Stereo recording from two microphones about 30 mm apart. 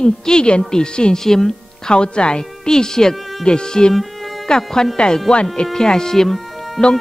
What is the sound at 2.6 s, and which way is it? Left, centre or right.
A woman's voice, left.